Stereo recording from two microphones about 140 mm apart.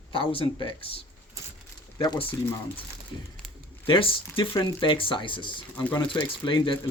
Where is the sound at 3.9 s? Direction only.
40° left (ahead or behind).